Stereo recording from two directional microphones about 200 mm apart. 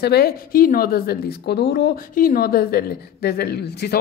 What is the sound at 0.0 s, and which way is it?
Speech, 50° left (ahead or behind).